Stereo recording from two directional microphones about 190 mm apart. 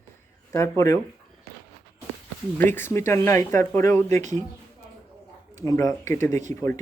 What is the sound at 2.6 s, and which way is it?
Speech, 10° left (ahead or behind).